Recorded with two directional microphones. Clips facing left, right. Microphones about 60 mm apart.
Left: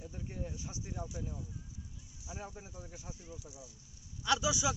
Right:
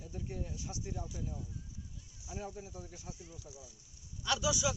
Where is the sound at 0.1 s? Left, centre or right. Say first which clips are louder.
Right 4 dB; centre.